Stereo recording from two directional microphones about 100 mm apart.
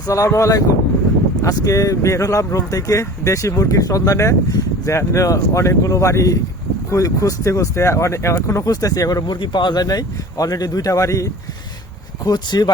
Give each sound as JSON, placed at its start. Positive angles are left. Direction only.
{"t": 0.1, "sound": "speech", "side_deg": 30}